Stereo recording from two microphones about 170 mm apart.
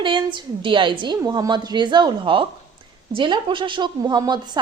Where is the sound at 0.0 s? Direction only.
25° right (ahead or behind).